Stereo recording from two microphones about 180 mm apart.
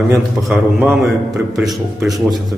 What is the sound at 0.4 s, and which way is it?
A man's voice, centre (ahead or behind).